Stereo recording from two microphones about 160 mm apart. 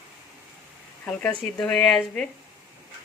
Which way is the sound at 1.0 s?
5° left (ahead or behind).